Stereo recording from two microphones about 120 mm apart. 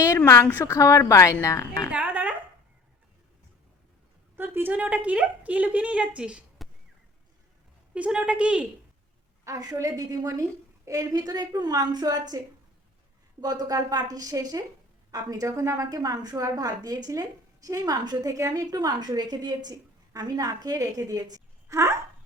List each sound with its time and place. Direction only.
0.4 s a woman's voice: 20° left (ahead or behind)
1.9 s a sound: 15° right (ahead or behind)
4.4 s a woman's voice: 15° right (ahead or behind)
7.9 s a woman's voice: 10° right (ahead or behind)
9.4 s a woman's voice: 30° right (ahead or behind)
13.4 s a woman's voice: 35° right (ahead or behind)